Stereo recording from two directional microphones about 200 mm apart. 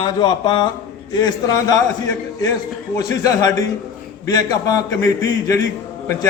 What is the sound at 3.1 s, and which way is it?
A man's voice, 20° left (ahead or behind).